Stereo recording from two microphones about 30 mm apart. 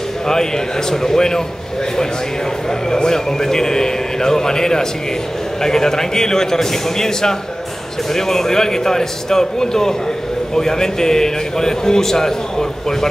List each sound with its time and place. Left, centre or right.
0.3 s a man's voice: centre
2.9 s a man's voice: left